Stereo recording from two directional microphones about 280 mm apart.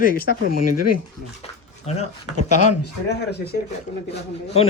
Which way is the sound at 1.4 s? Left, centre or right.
Left.